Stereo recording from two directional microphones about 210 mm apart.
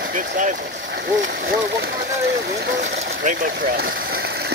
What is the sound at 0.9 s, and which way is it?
Speech, 55° right (ahead or behind).